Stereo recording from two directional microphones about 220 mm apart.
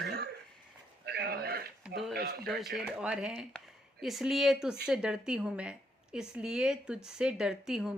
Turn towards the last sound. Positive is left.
turn(degrees=-5)  # may be behind; listen again after turning